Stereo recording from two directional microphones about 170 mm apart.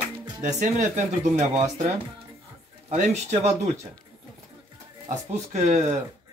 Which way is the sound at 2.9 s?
45° right (ahead or behind).